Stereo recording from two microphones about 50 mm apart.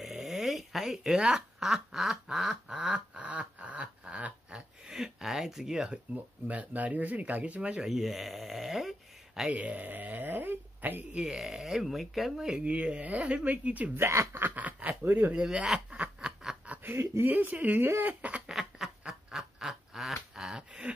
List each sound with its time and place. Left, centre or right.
0.0 s speech: centre
3.2 s a sound: right; by 5.9 s centre
5.9 s speech: right
7.8 s speech: centre
9.5 s speech: right
11.1 s speech: centre
12.4 s speech: centre
14.0 s speech: right
14.4 s a sound: right
15.0 s speech: right
15.3 s snicker: centre
16.9 s speech: right
17.3 s speech: right
18.5 s a sound: centre